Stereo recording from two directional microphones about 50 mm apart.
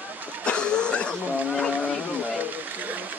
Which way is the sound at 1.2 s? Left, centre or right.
Right.